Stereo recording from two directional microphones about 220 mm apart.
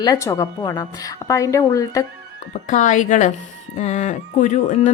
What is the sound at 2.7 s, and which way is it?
Speech, 35° left (ahead or behind).